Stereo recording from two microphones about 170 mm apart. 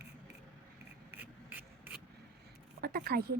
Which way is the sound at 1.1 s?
10° right (ahead or behind).